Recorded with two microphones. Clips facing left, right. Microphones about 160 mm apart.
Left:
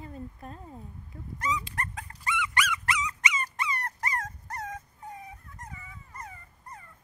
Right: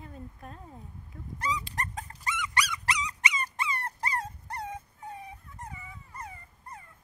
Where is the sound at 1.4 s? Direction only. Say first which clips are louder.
Left 1 dB; 35° right (ahead or behind).